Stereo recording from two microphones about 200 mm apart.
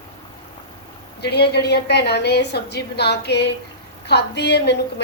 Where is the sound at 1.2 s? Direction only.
55° left (ahead or behind).